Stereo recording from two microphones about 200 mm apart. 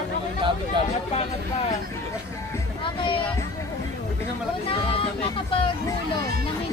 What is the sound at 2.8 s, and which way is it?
Speech, 25° left (ahead or behind).